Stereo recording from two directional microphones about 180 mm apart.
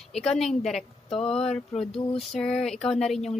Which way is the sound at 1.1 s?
35° left (ahead or behind).